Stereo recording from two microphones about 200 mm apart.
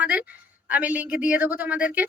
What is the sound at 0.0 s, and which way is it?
A woman's voice, 5° right (ahead or behind).